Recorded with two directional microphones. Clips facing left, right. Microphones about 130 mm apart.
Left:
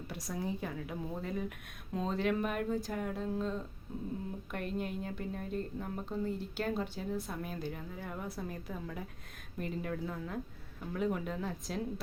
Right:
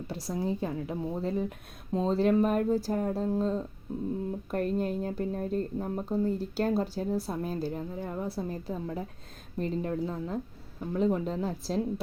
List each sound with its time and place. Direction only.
0.1 s speech: 30° right (ahead or behind)